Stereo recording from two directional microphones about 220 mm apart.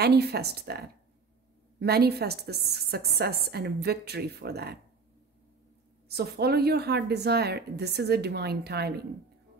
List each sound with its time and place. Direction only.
0.0 s a woman's voice: 50° right (ahead or behind)
6.0 s a woman's voice: 45° right (ahead or behind)